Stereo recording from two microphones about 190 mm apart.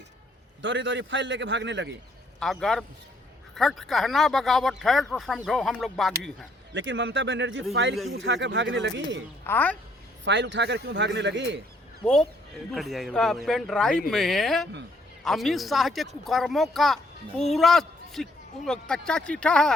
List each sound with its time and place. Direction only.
0.6 s a man's voice: 75° right (ahead or behind)
2.4 s speech: centre (ahead or behind)
6.7 s a man's voice: 70° right (ahead or behind)
9.5 s speech: 10° left (ahead or behind)
10.2 s a man's voice: 70° right (ahead or behind)
12.0 s a woman's voice: centre (ahead or behind)